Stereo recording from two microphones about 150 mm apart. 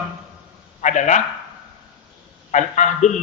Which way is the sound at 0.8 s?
55° left (ahead or behind).